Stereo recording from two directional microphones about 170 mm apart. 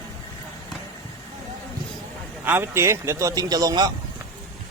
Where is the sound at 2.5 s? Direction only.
15° right (ahead or behind).